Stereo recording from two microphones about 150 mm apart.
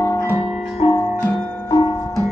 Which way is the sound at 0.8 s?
35° left (ahead or behind).